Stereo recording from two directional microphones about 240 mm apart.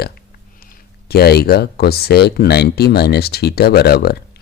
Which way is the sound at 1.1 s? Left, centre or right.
Left.